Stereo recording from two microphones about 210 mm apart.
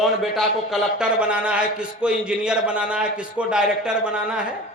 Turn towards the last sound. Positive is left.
turn(degrees=-5)  # may be behind; listen again after turning